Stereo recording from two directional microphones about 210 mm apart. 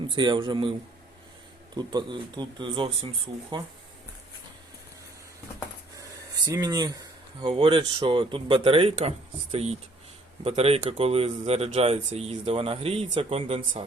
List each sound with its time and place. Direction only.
0.1 s speech: 20° right (ahead or behind)
1.7 s speech: 20° right (ahead or behind)
6.4 s speech: 20° right (ahead or behind)